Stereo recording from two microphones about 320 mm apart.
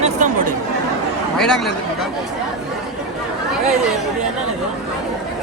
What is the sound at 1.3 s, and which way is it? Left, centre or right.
Speech, centre.